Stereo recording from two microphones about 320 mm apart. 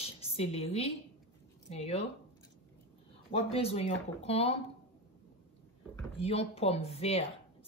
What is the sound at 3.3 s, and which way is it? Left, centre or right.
Speech, centre.